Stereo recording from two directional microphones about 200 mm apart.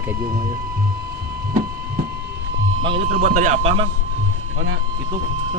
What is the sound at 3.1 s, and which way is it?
Speech, 40° right (ahead or behind).